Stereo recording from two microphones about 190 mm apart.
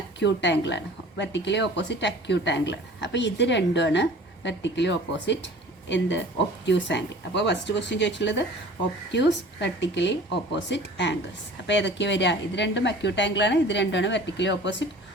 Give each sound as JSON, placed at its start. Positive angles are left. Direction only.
{"t": 0.2, "sound": "a woman's voice", "side_deg": 65}